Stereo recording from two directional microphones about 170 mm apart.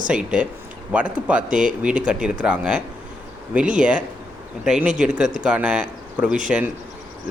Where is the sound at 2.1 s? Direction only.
5° right (ahead or behind).